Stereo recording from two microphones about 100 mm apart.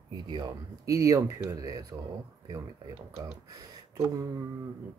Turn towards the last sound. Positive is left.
turn(degrees=-35)  # may be behind; listen again after turning